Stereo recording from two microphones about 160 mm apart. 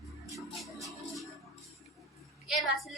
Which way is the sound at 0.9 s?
Centre (ahead or behind).